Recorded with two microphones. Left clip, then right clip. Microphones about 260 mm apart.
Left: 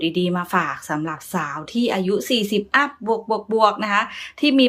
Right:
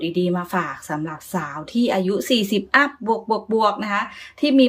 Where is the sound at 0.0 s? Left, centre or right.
Centre.